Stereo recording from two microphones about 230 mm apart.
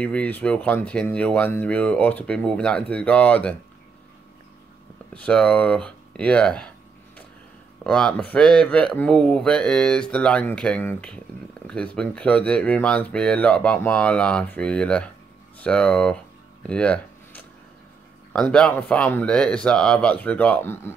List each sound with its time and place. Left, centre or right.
0.0 s speech: centre
5.1 s speech: centre
7.8 s speech: centre
16.6 s a sound: centre
18.3 s speech: centre